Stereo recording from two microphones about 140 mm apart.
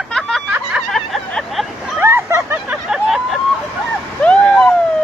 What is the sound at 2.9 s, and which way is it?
Vehicle, centre (ahead or behind).